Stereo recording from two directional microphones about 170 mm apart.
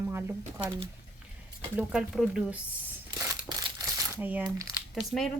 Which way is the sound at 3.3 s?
20° right (ahead or behind).